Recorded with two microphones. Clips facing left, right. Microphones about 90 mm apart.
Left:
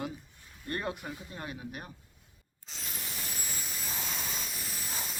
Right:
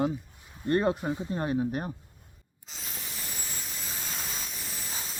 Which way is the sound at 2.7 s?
Centre (ahead or behind).